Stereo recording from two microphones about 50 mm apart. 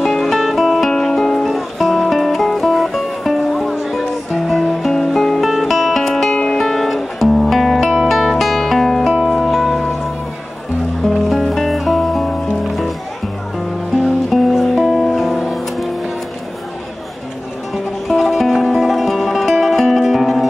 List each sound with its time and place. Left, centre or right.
0.0 s music: centre
6.3 s music: centre
6.6 s music: centre
9.1 s music: centre
9.4 s music: centre
11.1 s music: centre
14.3 s music: centre
18.0 s music: centre